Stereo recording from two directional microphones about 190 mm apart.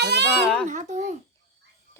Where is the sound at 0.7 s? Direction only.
40° right (ahead or behind).